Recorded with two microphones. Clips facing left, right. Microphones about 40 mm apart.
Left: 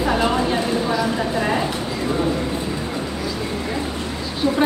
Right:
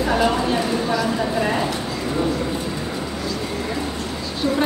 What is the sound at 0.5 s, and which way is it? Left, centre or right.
Speech, centre.